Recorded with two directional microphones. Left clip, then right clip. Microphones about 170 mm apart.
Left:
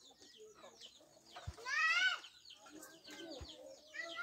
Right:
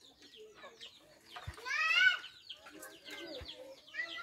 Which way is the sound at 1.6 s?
40° right (ahead or behind).